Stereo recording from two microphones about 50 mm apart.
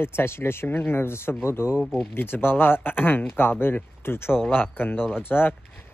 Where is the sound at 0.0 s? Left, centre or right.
Left.